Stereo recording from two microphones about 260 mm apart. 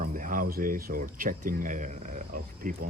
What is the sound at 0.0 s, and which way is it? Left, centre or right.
Speech, right.